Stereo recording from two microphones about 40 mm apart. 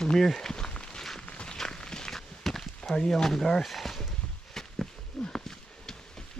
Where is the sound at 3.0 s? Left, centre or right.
Centre.